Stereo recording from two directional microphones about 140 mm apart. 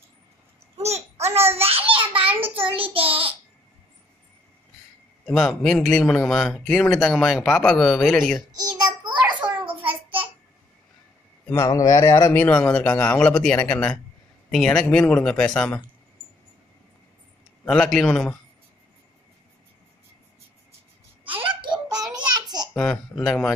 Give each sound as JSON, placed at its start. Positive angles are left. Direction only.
{"t": 0.7, "sound": "babbling", "side_deg": -50}
{"t": 1.6, "sound": "a sound", "side_deg": -45}
{"t": 2.4, "sound": "child singing", "side_deg": -40}
{"t": 5.2, "sound": "a man's voice", "side_deg": 5}
{"t": 8.5, "sound": "a sound", "side_deg": -35}
{"t": 11.5, "sound": "speech", "side_deg": 25}
{"t": 12.4, "sound": "a man's voice", "side_deg": 10}
{"t": 17.6, "sound": "a man's voice", "side_deg": 5}
{"t": 21.4, "sound": "a sound", "side_deg": -35}
{"t": 22.8, "sound": "a man's voice", "side_deg": 5}